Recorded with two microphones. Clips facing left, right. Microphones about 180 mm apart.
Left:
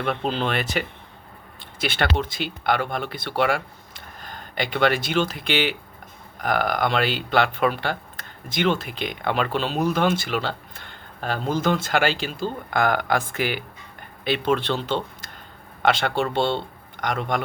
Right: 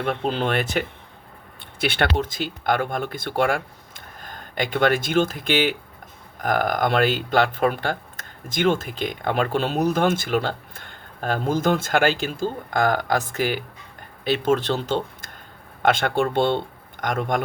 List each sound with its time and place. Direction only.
0.0 s speech: 45° right (ahead or behind)